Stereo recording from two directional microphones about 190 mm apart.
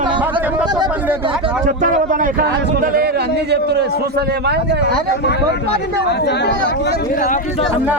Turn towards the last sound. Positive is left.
turn(degrees=45)  # may be behind; listen again after turning